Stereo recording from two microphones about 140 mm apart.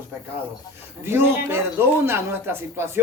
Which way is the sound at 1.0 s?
20° right (ahead or behind).